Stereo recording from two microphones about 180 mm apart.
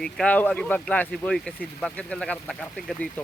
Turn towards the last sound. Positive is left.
turn(degrees=10)  # may be behind; listen again after turning